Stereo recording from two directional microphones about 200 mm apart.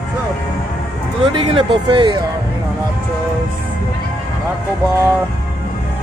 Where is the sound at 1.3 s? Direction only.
25° right (ahead or behind).